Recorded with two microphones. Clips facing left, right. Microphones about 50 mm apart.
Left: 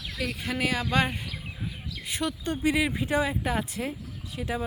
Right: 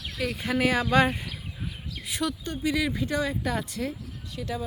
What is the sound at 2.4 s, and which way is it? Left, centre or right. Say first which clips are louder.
Speech: left 2 dB; left.